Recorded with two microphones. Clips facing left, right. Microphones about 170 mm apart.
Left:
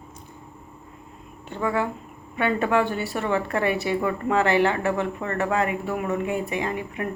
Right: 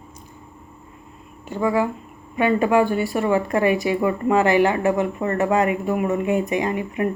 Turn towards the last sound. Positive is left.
turn(degrees=-15)  # may be behind; listen again after turning